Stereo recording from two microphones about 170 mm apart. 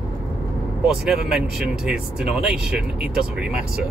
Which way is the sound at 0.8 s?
5° right (ahead or behind).